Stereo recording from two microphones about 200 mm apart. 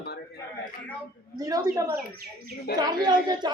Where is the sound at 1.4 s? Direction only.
20° right (ahead or behind).